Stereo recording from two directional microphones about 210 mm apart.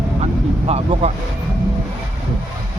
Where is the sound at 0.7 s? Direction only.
30° right (ahead or behind).